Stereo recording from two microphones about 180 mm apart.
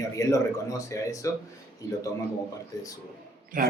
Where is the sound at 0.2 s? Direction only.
20° left (ahead or behind).